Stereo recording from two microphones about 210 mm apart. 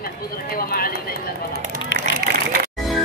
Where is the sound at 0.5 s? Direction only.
45° left (ahead or behind).